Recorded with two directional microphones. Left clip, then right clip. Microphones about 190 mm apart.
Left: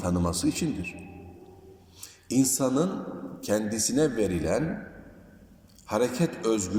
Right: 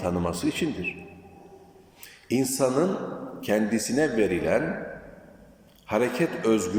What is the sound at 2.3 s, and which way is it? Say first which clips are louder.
A man's voice: right 2 dB; 15° left (ahead or behind).